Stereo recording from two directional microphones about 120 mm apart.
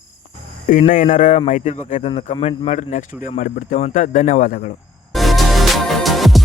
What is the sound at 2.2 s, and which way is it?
A man's voice, 60° left (ahead or behind).